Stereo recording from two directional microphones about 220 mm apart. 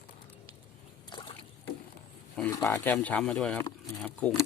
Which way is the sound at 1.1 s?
20° left (ahead or behind).